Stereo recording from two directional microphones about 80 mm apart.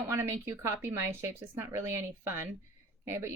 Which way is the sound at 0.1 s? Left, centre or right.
Right.